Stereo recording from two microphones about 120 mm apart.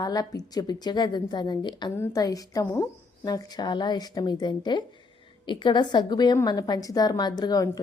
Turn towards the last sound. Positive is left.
turn(degrees=30)  # may be behind; listen again after turning